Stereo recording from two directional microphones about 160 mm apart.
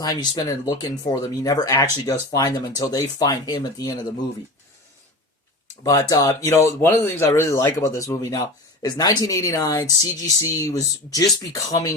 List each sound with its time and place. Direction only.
0.0 s speech: 25° left (ahead or behind)
5.8 s speech: 20° left (ahead or behind)